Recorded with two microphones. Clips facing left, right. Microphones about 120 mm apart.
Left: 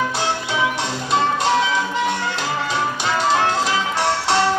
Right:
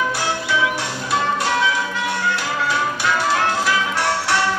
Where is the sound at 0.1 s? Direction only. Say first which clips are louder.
Right 1 dB; 20° left (ahead or behind).